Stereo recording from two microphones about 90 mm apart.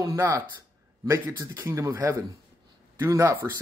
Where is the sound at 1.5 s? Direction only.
30° right (ahead or behind).